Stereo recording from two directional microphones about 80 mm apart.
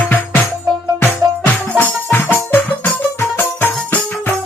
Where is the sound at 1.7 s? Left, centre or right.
Left.